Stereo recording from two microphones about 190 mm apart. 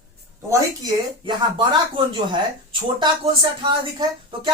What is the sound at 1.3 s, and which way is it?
Speech, 25° right (ahead or behind).